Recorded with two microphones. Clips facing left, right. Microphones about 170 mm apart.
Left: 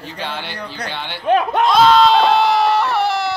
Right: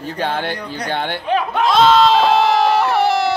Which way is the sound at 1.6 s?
Centre (ahead or behind).